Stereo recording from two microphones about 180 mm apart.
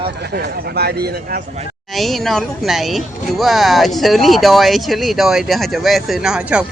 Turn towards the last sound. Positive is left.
turn(degrees=-5)  # may be behind; listen again after turning